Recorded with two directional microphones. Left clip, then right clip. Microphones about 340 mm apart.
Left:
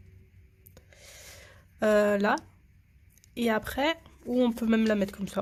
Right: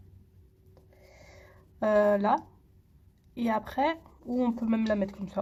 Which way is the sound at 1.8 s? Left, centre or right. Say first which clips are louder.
Even; left.